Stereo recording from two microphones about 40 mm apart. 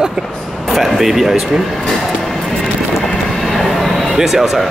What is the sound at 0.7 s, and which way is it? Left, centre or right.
Speech, centre.